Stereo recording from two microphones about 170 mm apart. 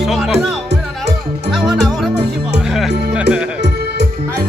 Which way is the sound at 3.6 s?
90° right.